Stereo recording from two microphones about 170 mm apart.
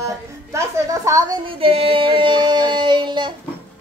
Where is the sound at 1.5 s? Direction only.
35° right (ahead or behind).